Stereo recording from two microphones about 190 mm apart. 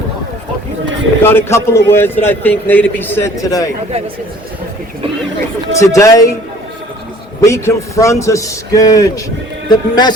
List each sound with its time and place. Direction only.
1.2 s a man's voice: 10° left (ahead or behind)
5.8 s a man's voice: 15° left (ahead or behind)
7.4 s a man's voice: 15° left (ahead or behind)